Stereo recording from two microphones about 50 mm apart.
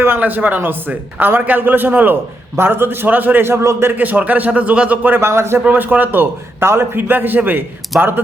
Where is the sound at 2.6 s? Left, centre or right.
Right.